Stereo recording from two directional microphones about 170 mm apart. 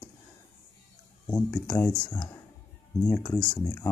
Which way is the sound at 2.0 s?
25° left (ahead or behind).